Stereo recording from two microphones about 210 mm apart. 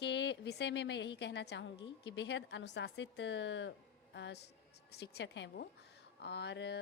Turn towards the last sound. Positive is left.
turn(degrees=55)  # may be behind; listen again after turning